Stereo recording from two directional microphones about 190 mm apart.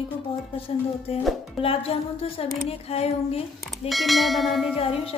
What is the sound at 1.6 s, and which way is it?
Music, 30° left (ahead or behind).